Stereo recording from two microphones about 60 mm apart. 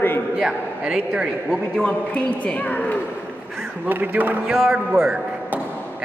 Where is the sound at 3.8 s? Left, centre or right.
Right.